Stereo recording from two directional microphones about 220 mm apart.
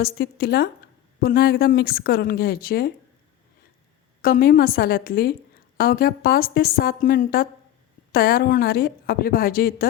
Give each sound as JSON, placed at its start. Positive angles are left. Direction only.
{"t": 0.0, "sound": "a woman's voice", "side_deg": 45}
{"t": 4.2, "sound": "a woman's voice", "side_deg": 40}